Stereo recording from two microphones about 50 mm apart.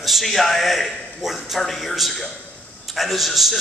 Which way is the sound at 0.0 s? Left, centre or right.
Centre.